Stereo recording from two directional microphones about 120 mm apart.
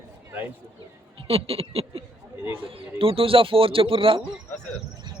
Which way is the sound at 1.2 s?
50° right (ahead or behind).